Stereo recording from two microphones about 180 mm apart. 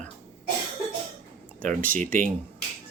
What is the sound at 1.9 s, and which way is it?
Speech, 50° right (ahead or behind).